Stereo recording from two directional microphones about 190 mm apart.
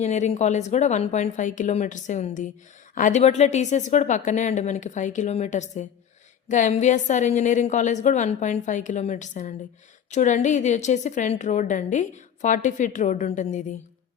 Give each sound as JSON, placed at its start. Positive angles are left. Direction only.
{"t": 0.0, "sound": "a woman's voice", "side_deg": 35}